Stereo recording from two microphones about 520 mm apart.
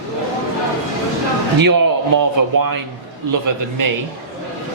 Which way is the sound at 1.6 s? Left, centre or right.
Right.